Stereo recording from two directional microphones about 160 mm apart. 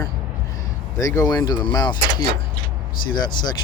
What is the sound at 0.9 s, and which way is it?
Speech, 20° left (ahead or behind).